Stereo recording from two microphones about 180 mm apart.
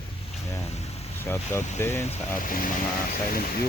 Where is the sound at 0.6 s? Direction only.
35° left (ahead or behind).